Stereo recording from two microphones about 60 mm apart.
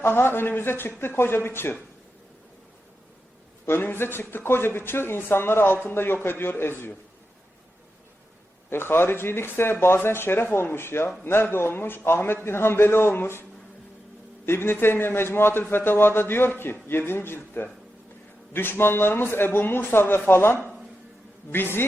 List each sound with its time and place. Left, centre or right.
0.0 s speech: left
3.7 s speech: left
8.7 s speech: left
14.4 s speech: left